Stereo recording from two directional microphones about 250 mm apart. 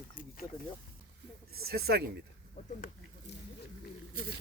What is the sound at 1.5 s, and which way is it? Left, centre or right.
Speech, right.